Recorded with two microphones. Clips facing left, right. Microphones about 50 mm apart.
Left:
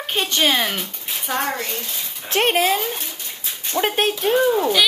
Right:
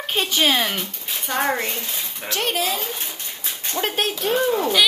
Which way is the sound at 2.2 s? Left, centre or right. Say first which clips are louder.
Left 6 dB; left.